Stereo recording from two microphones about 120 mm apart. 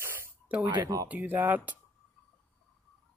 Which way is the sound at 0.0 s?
20° right (ahead or behind).